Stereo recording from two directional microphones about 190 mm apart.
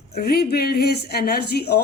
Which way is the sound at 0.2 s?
55° left (ahead or behind).